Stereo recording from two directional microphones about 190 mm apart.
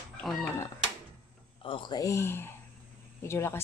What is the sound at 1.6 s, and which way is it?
Speech, 25° left (ahead or behind).